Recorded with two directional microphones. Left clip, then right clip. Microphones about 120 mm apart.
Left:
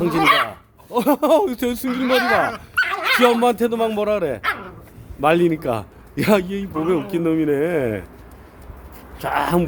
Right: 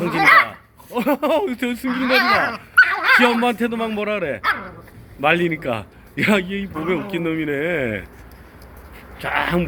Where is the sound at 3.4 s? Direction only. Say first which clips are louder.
Left 3 dB; 40° left (ahead or behind).